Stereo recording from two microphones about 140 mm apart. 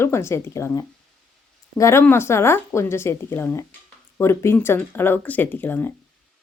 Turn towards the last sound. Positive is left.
turn(degrees=15)  # may be behind; listen again after turning